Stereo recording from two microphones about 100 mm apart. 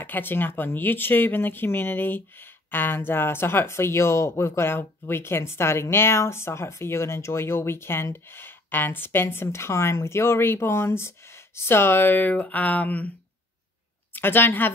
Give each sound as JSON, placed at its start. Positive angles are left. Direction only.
{"t": 0.0, "sound": "speech", "side_deg": 20}
{"t": 14.1, "sound": "a woman's voice", "side_deg": 20}